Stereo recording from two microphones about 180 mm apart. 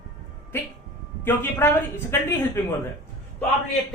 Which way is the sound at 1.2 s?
10° left (ahead or behind).